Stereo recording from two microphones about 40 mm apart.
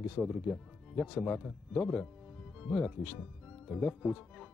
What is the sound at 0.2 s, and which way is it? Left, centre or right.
Speech, left.